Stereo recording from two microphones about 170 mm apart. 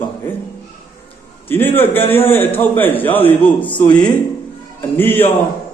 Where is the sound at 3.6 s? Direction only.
30° left (ahead or behind).